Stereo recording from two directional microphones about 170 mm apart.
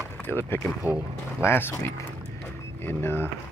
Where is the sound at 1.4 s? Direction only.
15° left (ahead or behind).